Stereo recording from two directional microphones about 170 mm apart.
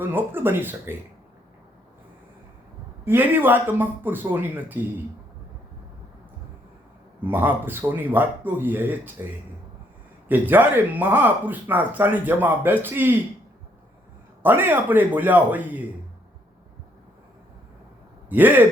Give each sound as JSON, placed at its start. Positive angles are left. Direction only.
{"t": 0.0, "sound": "speech", "side_deg": -10}
{"t": 3.0, "sound": "speech", "side_deg": -15}
{"t": 7.3, "sound": "speech", "side_deg": -10}
{"t": 10.2, "sound": "speech", "side_deg": -10}
{"t": 14.4, "sound": "speech", "side_deg": -10}
{"t": 18.3, "sound": "speech", "side_deg": -10}